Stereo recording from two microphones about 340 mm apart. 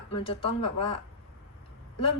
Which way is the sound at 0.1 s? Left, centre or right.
Centre.